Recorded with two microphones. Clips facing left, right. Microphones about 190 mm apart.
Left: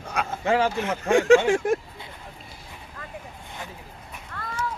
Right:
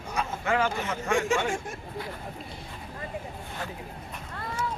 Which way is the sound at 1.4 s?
85° left.